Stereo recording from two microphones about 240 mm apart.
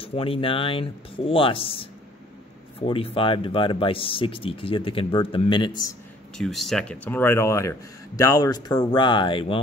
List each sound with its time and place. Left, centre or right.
0.0 s speech: left
6.3 s speech: centre; by 9.6 s left